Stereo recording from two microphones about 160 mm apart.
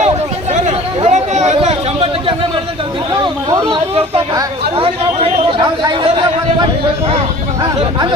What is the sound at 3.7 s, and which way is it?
Speech, 35° right (ahead or behind).